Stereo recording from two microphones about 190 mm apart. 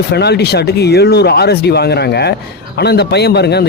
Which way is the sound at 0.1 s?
60° left (ahead or behind).